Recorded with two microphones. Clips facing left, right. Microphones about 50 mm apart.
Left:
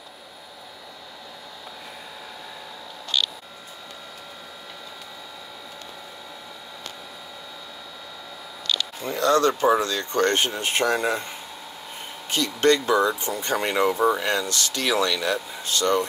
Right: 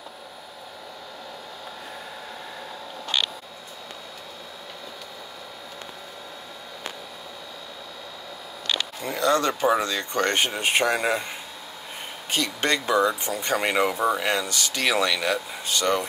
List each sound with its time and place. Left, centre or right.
8.7 s speech: centre